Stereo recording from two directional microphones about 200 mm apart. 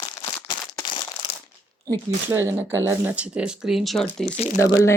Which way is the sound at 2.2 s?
10° right (ahead or behind).